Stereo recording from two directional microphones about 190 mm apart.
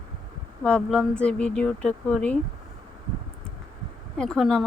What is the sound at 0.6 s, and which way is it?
Speech, 5° left (ahead or behind).